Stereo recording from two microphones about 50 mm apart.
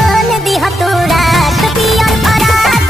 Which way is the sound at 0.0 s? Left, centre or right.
Centre.